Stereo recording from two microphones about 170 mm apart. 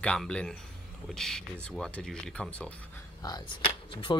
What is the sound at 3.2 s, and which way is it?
Speech, 25° left (ahead or behind).